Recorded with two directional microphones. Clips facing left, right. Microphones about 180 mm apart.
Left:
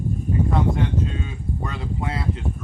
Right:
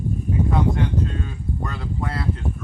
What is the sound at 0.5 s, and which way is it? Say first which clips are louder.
Speech: right 1 dB; centre (ahead or behind).